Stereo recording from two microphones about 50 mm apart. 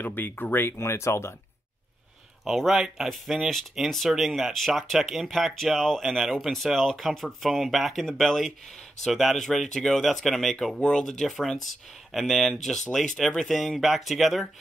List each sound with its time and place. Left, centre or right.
0.0 s speech: left
2.4 s speech: centre
10.8 s speech: centre